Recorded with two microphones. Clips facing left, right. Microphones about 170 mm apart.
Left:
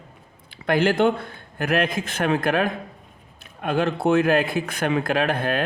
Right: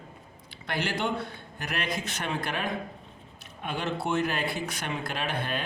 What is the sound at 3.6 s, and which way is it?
Speech, 60° left (ahead or behind).